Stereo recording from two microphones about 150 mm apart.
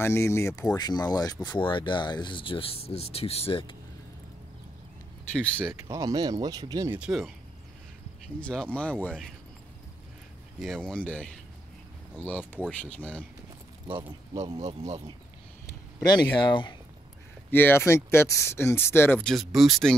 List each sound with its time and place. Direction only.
0.0 s speech: 15° left (ahead or behind); by 3.7 s 40° left (ahead or behind)
5.3 s speech: 10° left (ahead or behind)
5.7 s speech: 25° right (ahead or behind)
6.9 s speech: 5° right (ahead or behind)
8.4 s speech: 5° left (ahead or behind)
10.6 s speech: 5° left (ahead or behind)
13.8 s speech: 40° right (ahead or behind)
16.0 s speech: 30° left (ahead or behind)
17.5 s speech: 15° left (ahead or behind)